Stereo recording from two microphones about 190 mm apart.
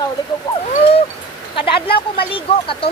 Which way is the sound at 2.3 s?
30° left (ahead or behind).